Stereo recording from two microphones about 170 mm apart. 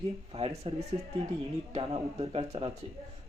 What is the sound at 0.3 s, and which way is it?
Speech, 35° right (ahead or behind).